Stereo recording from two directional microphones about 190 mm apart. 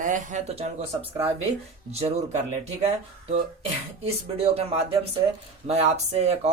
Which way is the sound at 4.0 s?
30° right (ahead or behind).